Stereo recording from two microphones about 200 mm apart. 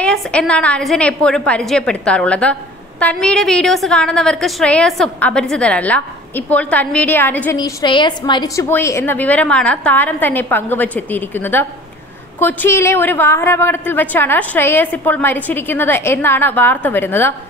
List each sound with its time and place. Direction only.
0.0 s a woman's voice: 5° left (ahead or behind)
7.5 s a woman's voice: 20° left (ahead or behind)